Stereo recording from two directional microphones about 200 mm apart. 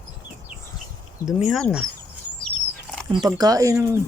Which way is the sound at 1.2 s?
Centre (ahead or behind).